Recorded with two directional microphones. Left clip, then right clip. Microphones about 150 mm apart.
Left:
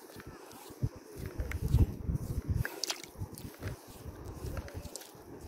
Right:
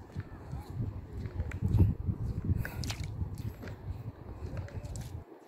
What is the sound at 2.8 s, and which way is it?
Biting, 90° left.